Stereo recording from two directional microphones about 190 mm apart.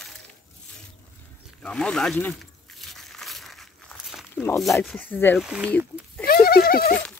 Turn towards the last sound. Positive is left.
turn(degrees=50)  # may be behind; listen again after turning